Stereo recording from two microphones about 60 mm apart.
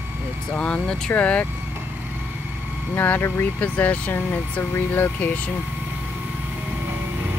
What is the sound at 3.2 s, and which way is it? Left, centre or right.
Speech, left.